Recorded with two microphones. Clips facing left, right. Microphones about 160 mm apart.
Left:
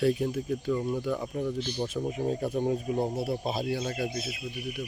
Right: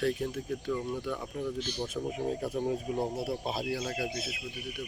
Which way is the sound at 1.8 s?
Centre (ahead or behind).